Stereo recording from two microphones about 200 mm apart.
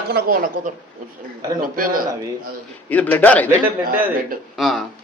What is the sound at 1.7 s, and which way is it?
Speech, 45° right (ahead or behind).